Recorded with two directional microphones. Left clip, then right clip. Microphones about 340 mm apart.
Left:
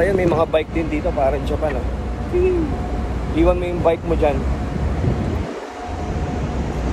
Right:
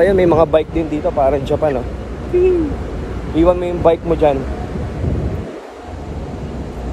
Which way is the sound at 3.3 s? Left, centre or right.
Right.